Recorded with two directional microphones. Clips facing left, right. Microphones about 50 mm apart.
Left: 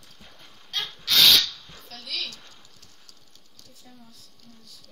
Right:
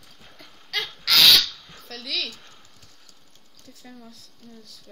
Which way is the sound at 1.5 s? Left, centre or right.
Centre.